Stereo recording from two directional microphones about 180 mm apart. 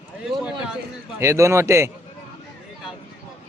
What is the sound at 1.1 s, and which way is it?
Speech, 15° right (ahead or behind).